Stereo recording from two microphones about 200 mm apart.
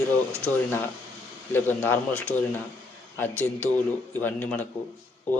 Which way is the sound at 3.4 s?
5° left (ahead or behind).